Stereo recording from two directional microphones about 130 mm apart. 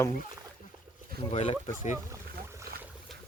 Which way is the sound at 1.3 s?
50° left (ahead or behind).